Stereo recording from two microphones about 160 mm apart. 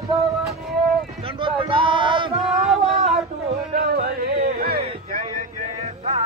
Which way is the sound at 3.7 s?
70° right (ahead or behind).